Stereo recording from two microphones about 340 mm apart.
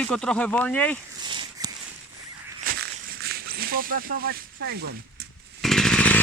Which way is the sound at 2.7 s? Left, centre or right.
Right.